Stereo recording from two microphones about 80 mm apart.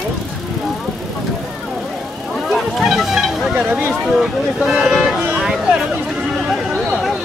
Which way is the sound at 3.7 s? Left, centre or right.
Right.